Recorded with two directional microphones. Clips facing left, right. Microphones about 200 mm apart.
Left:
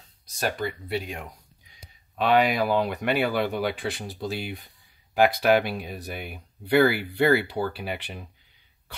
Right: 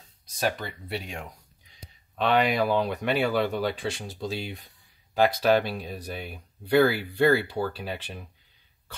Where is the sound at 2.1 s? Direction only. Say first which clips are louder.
Left 2 dB; 5° left (ahead or behind).